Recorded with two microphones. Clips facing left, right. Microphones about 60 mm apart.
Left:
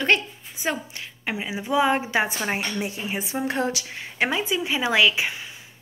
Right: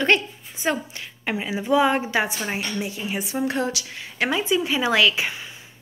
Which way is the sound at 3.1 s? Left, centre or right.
Left.